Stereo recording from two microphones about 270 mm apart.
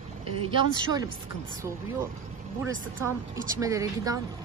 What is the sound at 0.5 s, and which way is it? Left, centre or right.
Speech, centre.